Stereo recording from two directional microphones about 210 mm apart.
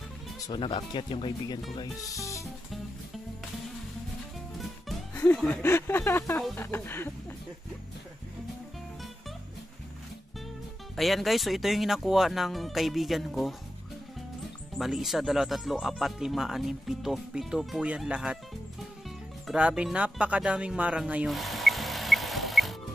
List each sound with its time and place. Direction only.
0.5 s speech: 20° left (ahead or behind)
4.6 s music: centre (ahead or behind)
5.2 s speech: 5° left (ahead or behind)
11.0 s speech: centre (ahead or behind)
14.8 s speech: centre (ahead or behind)
19.0 s music: centre (ahead or behind)